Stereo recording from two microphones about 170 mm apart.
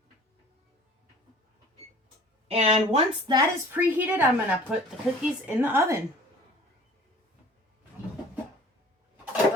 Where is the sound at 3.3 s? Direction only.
10° right (ahead or behind).